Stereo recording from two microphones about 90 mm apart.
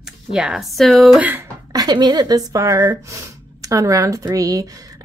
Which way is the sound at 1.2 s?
25° right (ahead or behind).